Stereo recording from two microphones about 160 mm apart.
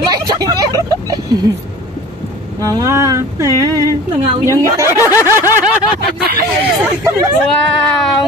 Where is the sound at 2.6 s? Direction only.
20° right (ahead or behind).